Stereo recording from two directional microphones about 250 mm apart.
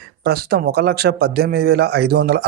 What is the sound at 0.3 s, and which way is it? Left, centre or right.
Speech, right.